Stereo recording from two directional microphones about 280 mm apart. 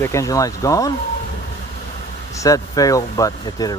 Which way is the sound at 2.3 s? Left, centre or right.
Centre.